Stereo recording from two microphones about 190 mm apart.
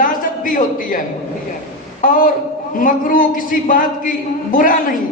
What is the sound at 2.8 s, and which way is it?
A woman's voice, 45° left (ahead or behind).